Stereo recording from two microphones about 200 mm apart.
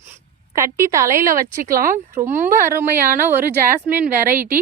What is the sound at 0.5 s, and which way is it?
Speech, 15° right (ahead or behind).